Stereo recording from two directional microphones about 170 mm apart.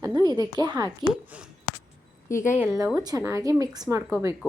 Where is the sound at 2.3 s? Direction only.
15° left (ahead or behind).